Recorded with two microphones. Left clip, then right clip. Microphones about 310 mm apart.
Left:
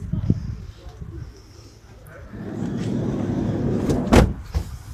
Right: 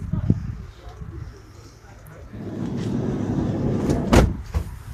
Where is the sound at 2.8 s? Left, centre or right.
Centre.